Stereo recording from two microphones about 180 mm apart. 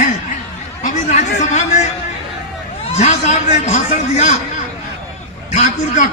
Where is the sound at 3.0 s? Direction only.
40° left (ahead or behind).